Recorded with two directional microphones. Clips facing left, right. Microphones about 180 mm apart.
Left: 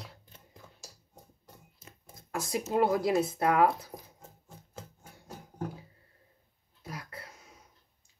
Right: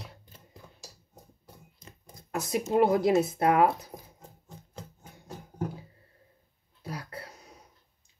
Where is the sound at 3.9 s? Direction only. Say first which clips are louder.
Right 1 dB; 5° left (ahead or behind).